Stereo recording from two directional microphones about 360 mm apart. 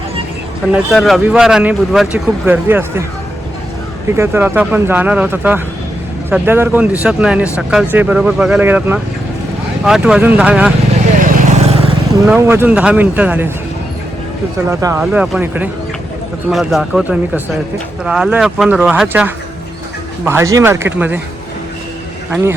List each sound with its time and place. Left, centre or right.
0.7 s speech: centre
4.2 s speech: centre
11.3 s vehicle: centre
12.3 s speech: centre
14.7 s speech: centre